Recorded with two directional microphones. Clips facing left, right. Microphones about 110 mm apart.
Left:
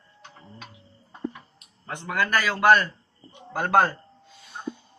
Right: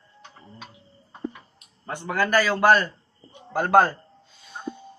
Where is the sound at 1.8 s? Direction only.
30° right (ahead or behind).